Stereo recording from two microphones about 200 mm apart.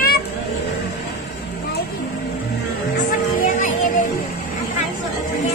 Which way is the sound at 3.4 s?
45° left (ahead or behind).